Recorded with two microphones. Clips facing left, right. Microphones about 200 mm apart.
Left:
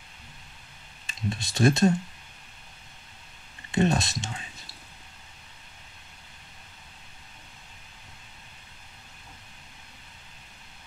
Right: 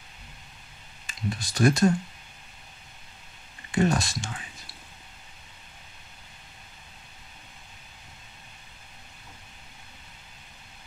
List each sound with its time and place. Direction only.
1.0 s speech: 25° left (ahead or behind)
3.7 s speech: 25° left (ahead or behind)